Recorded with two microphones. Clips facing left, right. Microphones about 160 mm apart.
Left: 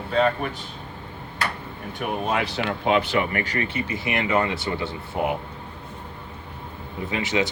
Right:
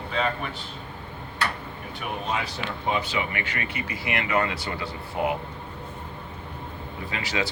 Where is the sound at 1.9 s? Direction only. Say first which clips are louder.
Left 5 dB; 60° left (ahead or behind).